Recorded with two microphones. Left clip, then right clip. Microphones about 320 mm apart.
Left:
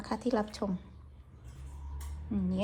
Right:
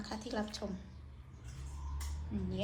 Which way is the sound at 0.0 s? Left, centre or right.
Centre.